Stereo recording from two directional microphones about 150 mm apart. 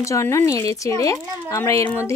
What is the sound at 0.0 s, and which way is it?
Speech, 20° left (ahead or behind).